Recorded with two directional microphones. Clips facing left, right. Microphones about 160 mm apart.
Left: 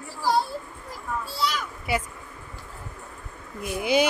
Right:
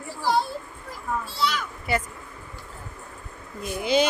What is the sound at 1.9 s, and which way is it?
Speech, 10° left (ahead or behind).